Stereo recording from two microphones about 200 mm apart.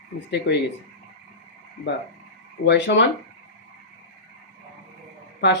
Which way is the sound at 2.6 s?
60° left (ahead or behind).